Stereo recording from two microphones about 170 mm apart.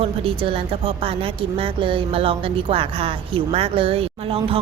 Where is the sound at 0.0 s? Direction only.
35° right (ahead or behind).